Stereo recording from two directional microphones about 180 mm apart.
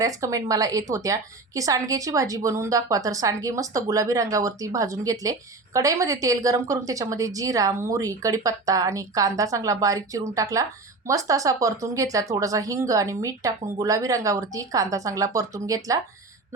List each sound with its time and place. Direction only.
0.0 s a woman's voice: 20° right (ahead or behind)